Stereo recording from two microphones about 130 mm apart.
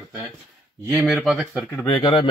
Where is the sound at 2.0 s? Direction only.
45° left (ahead or behind).